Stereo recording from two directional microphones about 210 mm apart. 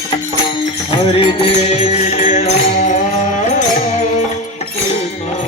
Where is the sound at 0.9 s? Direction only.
25° left (ahead or behind).